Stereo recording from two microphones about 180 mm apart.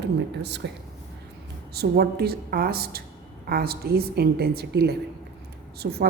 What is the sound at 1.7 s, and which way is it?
A woman's voice, 65° right (ahead or behind).